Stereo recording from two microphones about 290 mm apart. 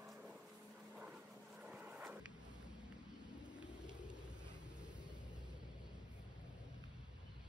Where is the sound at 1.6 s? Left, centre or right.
Centre.